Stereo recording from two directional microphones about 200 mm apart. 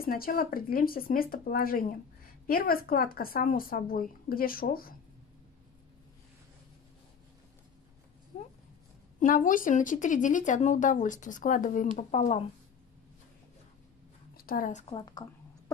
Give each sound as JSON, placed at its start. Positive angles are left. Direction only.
{"t": 0.0, "sound": "speech", "side_deg": 45}
{"t": 8.3, "sound": "a sound", "side_deg": 35}
{"t": 9.2, "sound": "speech", "side_deg": 40}
{"t": 14.3, "sound": "a woman's voice", "side_deg": 45}